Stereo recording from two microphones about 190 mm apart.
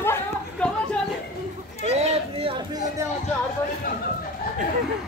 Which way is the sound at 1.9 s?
30° right (ahead or behind).